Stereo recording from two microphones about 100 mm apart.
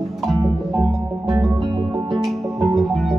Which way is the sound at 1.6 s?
45° right (ahead or behind).